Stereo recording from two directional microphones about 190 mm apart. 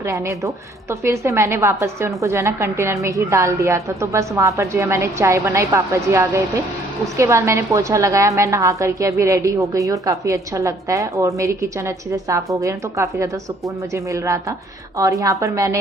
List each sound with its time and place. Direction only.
0.0 s a woman's voice: 15° right (ahead or behind)